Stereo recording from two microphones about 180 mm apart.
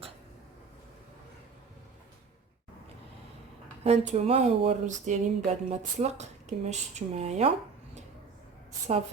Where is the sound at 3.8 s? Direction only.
35° right (ahead or behind).